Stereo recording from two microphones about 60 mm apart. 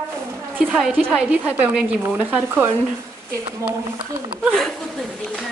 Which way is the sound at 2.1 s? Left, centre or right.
Right.